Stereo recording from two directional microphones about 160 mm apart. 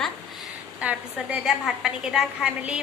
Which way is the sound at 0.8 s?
10° right (ahead or behind).